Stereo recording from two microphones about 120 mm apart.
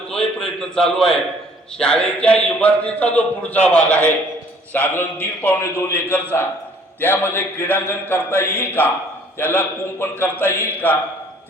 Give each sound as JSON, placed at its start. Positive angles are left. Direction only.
{"t": 0.1, "sound": "a man's voice", "side_deg": 5}